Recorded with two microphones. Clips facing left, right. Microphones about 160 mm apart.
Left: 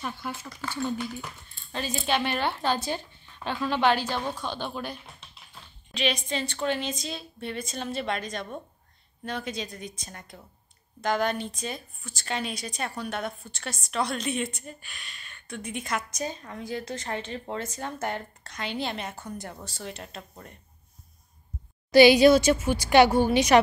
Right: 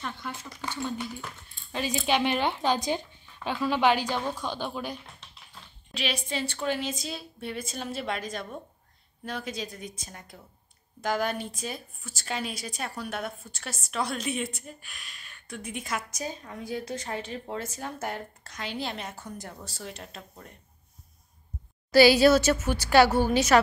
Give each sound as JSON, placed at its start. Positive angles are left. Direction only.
{"t": 0.0, "sound": "a woman's voice", "side_deg": 10}
{"t": 0.6, "sound": "a woman's voice", "side_deg": -15}
{"t": 5.9, "sound": "a woman's voice", "side_deg": -5}
{"t": 21.9, "sound": "a woman's voice", "side_deg": 15}